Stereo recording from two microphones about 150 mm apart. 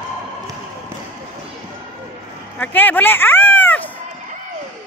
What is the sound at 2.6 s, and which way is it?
Speech, 10° left (ahead or behind).